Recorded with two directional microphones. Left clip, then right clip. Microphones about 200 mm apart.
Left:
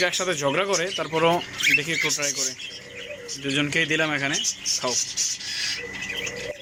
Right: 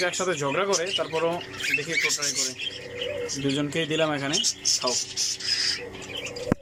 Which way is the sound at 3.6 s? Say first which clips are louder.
Left 5 dB; 15° right (ahead or behind).